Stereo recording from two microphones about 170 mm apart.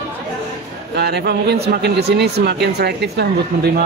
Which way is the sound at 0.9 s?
75° right (ahead or behind).